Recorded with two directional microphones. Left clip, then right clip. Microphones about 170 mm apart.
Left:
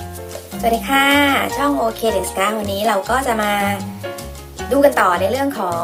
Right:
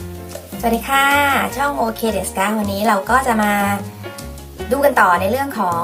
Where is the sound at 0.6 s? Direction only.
10° left (ahead or behind).